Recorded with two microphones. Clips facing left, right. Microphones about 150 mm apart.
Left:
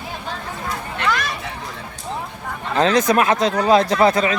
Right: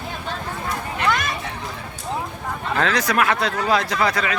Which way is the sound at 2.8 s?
25° left (ahead or behind).